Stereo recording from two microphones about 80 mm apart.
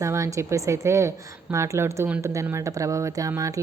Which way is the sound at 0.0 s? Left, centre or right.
Right.